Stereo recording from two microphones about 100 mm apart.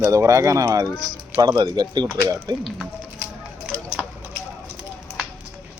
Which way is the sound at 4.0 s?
10° right (ahead or behind).